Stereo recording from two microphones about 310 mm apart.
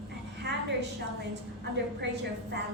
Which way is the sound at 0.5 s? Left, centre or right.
Right.